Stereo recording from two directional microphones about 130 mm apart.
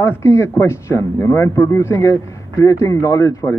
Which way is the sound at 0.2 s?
20° left (ahead or behind).